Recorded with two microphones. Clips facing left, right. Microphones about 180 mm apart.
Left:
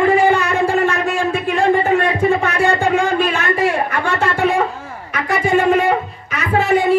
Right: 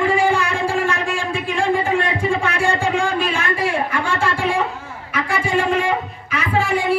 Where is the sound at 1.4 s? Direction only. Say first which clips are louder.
Left 4 dB; 60° left (ahead or behind).